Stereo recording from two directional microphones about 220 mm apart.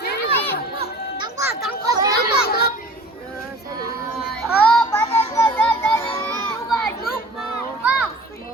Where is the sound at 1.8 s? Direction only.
15° right (ahead or behind).